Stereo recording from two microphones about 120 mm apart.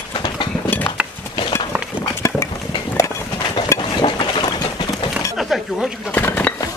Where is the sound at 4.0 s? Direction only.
40° left (ahead or behind).